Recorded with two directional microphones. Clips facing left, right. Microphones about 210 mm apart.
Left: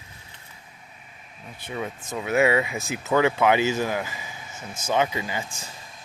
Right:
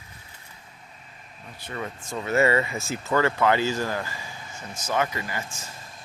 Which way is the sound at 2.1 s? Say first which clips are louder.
Left 1 dB; centre (ahead or behind).